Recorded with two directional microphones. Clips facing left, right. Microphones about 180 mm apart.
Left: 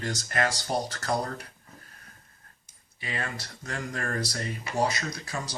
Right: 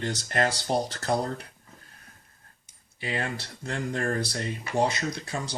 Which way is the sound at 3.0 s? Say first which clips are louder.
Right 4 dB; 30° right (ahead or behind).